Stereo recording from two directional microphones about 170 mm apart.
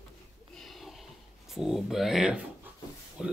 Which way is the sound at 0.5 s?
Centre (ahead or behind).